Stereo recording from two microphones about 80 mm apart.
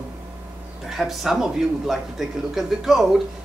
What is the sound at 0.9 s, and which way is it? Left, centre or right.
A man's voice, centre.